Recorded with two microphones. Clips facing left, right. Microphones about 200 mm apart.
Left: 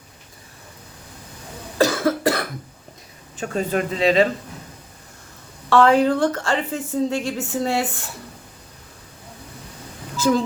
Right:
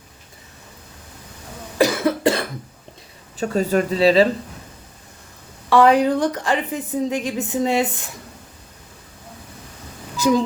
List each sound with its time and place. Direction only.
1.8 s cough: 20° right (ahead or behind)
3.3 s speech: 40° right (ahead or behind)
5.6 s a woman's voice: 15° right (ahead or behind)
10.2 s speech: 15° right (ahead or behind)